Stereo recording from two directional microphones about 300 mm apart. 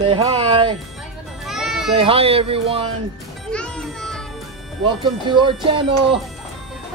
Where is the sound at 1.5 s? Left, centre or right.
Centre.